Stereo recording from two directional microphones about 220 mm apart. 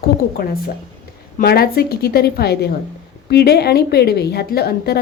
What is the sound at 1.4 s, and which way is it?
A woman's voice, 45° left (ahead or behind).